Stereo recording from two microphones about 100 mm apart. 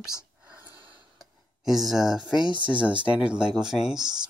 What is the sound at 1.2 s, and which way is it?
Speech, 5° right (ahead or behind).